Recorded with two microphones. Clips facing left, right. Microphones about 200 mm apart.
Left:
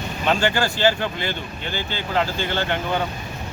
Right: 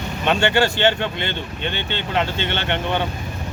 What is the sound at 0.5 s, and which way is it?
Speech, 25° right (ahead or behind).